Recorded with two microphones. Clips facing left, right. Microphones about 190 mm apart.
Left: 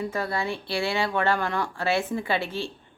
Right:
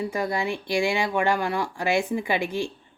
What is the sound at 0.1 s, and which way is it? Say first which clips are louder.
A woman's voice: right 2 dB; 15° right (ahead or behind).